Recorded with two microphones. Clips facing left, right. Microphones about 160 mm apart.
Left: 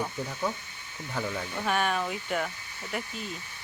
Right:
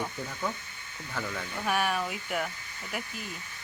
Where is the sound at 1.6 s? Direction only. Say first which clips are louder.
Left 1 dB; 10° right (ahead or behind).